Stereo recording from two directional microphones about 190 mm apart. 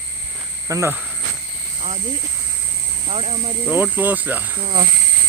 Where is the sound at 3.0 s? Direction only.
35° right (ahead or behind).